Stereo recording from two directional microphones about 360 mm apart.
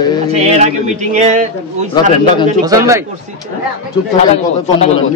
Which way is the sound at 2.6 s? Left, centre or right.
Centre.